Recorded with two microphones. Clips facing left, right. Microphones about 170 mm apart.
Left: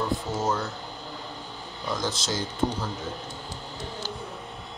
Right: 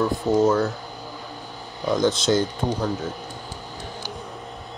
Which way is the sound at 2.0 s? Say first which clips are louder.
Right 13 dB; 60° right (ahead or behind).